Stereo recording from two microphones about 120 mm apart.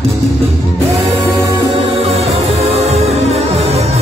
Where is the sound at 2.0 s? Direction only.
55° right (ahead or behind).